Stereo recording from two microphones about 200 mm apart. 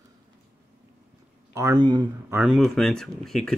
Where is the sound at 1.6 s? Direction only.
20° right (ahead or behind).